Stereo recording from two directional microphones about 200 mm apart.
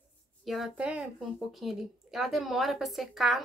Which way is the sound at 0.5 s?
5° right (ahead or behind).